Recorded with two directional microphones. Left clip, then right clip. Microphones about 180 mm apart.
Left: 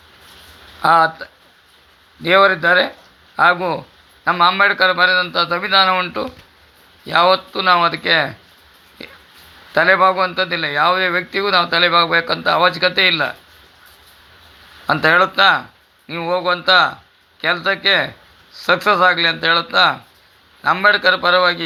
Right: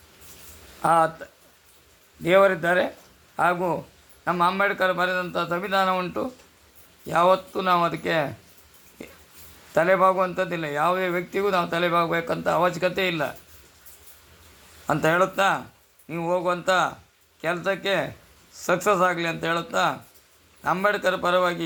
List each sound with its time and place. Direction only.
0.8 s a man's voice: 15° left (ahead or behind)
9.7 s a man's voice: 5° left (ahead or behind)
14.8 s a man's voice: 5° left (ahead or behind)